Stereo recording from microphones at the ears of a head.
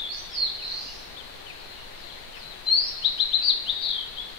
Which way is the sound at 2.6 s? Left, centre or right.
Left.